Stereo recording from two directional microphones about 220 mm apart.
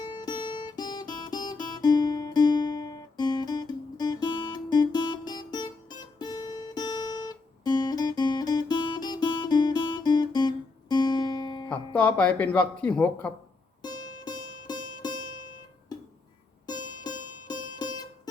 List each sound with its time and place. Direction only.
0.0 s guitar: 20° left (ahead or behind)
11.9 s speech: 5° left (ahead or behind)
13.8 s music: 20° left (ahead or behind)
16.6 s music: 20° left (ahead or behind)